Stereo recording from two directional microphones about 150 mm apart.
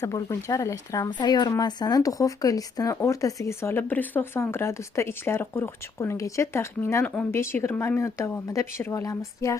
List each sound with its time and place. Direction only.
0.0 s speech: 20° left (ahead or behind)